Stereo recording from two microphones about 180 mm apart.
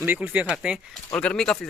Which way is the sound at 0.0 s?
10° right (ahead or behind).